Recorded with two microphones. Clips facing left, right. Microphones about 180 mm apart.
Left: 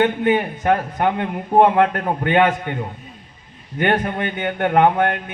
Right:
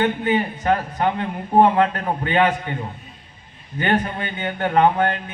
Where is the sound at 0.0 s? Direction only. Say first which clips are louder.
Left 3 dB; 60° left (ahead or behind).